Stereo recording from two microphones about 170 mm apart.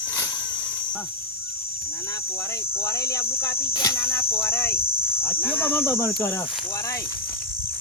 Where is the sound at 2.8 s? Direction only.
15° left (ahead or behind).